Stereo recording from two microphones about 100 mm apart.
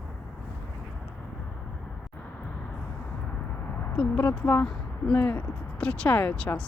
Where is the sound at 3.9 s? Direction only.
15° left (ahead or behind).